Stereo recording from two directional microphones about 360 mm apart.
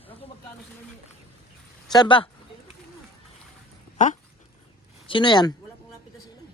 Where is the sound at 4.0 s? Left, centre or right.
Centre.